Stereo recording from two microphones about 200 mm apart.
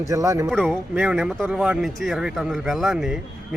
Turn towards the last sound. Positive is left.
turn(degrees=0)  # may be behind; listen again after turning